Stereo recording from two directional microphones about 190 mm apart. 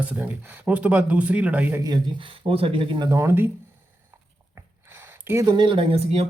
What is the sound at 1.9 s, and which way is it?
Speech, 25° right (ahead or behind).